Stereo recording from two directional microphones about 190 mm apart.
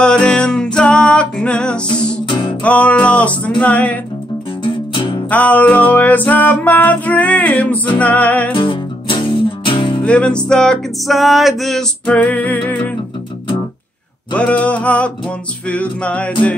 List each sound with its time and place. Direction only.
0.0 s music: 5° left (ahead or behind)
2.2 s music: 25° left (ahead or behind)
2.6 s music: 5° left (ahead or behind)
4.9 s music: 25° left (ahead or behind)
5.3 s music: 10° left (ahead or behind)
8.5 s music: 25° left (ahead or behind)
10.0 s music: 5° left (ahead or behind)
14.3 s music: 5° left (ahead or behind)